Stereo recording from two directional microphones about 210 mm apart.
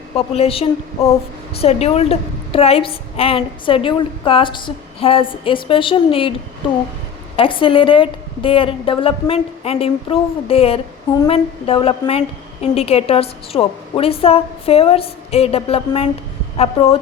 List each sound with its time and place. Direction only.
0.2 s a woman's voice: 25° left (ahead or behind)
7.3 s a woman's voice: 25° left (ahead or behind)